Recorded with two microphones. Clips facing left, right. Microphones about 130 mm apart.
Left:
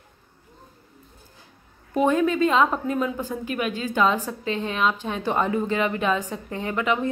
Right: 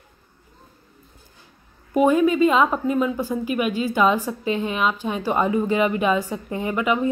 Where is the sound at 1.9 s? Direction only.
10° right (ahead or behind).